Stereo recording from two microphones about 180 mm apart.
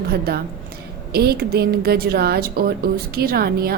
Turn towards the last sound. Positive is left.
turn(degrees=-55)  # may be behind; listen again after turning